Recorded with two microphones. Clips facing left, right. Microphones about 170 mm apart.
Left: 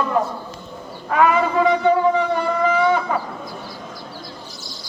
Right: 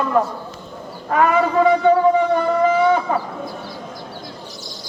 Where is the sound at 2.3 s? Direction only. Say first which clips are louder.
Right 3 dB; 40° right (ahead or behind).